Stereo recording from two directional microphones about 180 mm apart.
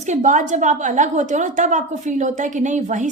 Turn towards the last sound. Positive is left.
turn(degrees=-40)  # may be behind; listen again after turning